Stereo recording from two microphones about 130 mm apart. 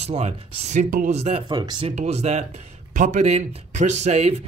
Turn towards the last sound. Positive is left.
turn(degrees=-55)  # may be behind; listen again after turning